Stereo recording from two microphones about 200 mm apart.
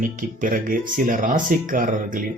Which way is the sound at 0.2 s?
45° right (ahead or behind).